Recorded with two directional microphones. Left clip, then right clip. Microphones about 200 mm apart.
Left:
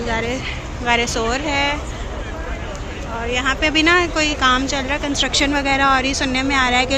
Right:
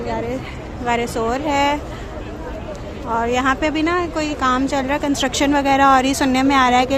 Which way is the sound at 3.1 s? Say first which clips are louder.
Right 2 dB; 25° right (ahead or behind).